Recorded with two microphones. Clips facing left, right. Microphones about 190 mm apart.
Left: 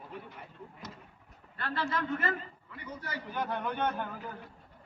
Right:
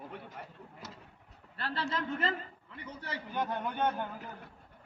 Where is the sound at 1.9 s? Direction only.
25° right (ahead or behind).